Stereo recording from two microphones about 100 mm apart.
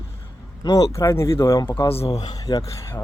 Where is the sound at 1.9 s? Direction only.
75° left (ahead or behind).